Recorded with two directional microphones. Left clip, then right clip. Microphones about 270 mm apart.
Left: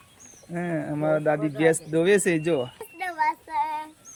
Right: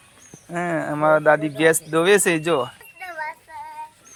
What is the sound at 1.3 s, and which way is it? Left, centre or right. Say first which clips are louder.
Speech: right 4 dB; centre.